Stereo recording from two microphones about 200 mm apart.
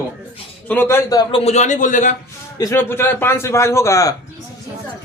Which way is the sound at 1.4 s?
35° left (ahead or behind).